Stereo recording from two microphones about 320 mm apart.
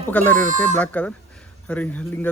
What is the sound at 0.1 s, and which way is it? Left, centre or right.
Speech, centre.